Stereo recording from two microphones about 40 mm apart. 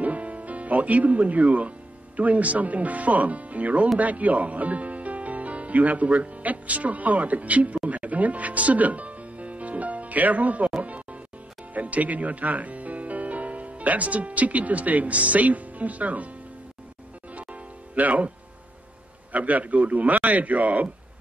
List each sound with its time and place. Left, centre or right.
0.0 s music: right
2.1 s a man's voice: right
10.8 s music: right
11.7 s speech: right
17.3 s music: right
19.3 s speech: right